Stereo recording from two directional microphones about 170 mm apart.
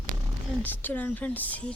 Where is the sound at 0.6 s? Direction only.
10° left (ahead or behind).